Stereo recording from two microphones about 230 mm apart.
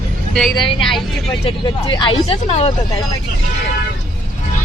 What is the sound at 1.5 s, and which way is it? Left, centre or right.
Speech, centre.